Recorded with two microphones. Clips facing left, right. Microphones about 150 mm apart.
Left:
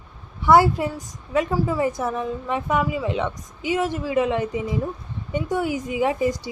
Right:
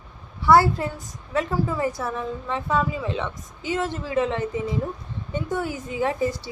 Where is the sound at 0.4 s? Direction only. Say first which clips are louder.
Left 1 dB; 15° left (ahead or behind).